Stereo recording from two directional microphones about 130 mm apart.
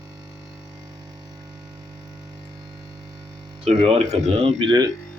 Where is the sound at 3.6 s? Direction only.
50° right (ahead or behind).